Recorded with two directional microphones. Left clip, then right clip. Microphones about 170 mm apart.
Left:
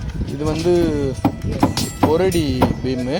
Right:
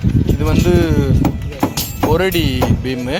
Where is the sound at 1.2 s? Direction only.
60° left (ahead or behind).